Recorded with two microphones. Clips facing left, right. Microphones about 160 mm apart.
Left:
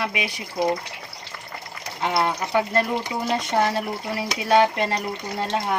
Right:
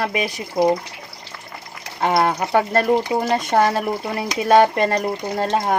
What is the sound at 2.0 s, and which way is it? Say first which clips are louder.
Speech: right 5 dB; 50° right (ahead or behind).